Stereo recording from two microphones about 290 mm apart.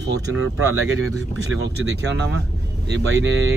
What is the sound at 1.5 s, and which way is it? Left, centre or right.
Speech, right.